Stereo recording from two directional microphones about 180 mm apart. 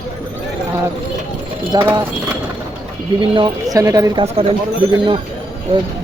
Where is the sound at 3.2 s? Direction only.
25° right (ahead or behind).